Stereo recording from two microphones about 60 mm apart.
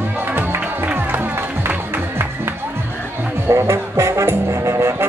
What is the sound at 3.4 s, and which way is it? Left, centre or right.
Music, right.